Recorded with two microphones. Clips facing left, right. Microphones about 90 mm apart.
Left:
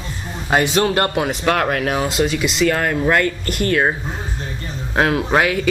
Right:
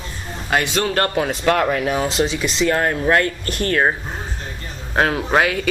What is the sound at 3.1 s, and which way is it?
Speech, 40° right (ahead or behind).